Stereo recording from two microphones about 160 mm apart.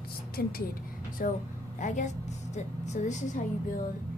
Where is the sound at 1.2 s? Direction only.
60° left (ahead or behind).